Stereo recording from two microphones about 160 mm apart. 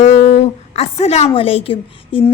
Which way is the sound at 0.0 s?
40° left (ahead or behind).